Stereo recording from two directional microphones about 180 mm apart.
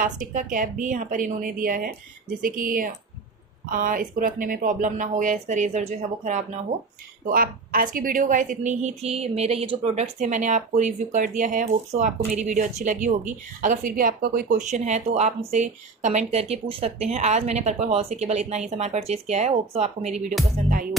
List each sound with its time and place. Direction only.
0.0 s a woman's voice: 45° right (ahead or behind)
6.7 s speech: 15° right (ahead or behind)
7.2 s a woman's voice: 50° right (ahead or behind)